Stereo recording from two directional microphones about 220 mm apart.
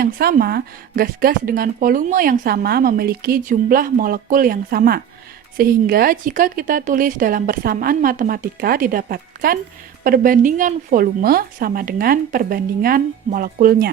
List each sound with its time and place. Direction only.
0.0 s a woman's voice: 40° right (ahead or behind)